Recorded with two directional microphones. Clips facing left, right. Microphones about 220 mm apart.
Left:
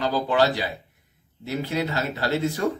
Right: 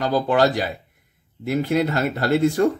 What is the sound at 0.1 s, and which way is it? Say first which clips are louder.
Speech: right 6 dB; 50° right (ahead or behind).